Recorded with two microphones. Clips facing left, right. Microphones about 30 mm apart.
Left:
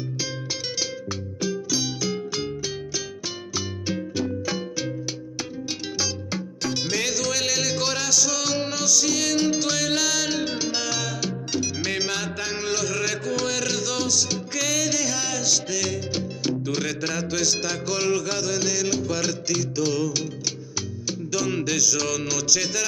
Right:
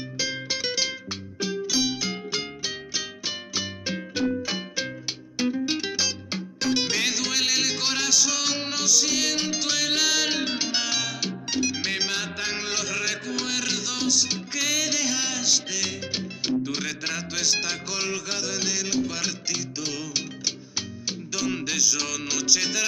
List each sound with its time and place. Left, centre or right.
1.4 s music: right
21.3 s music: centre